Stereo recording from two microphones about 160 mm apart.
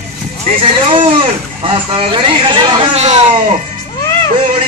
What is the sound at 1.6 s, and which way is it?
Speech, 35° right (ahead or behind).